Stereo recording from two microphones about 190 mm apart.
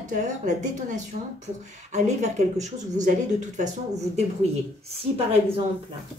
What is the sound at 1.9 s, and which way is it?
A woman's voice, 40° right (ahead or behind).